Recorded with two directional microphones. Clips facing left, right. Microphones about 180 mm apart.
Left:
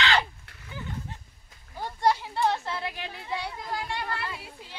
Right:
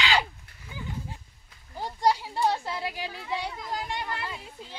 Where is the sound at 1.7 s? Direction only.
10° right (ahead or behind).